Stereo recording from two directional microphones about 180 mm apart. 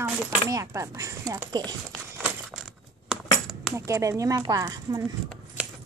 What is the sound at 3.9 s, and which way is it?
Speech, 15° right (ahead or behind).